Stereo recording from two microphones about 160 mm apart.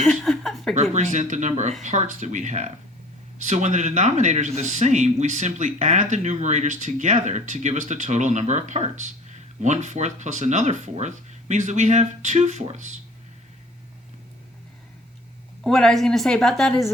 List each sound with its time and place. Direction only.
0.0 s a sound: centre (ahead or behind)
0.7 s speech: 45° right (ahead or behind)
15.6 s a woman's voice: 5° left (ahead or behind)